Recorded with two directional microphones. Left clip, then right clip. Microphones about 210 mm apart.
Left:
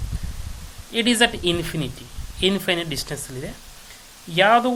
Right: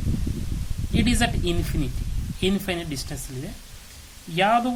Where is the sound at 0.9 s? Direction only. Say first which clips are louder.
Left 6 dB; 5° left (ahead or behind).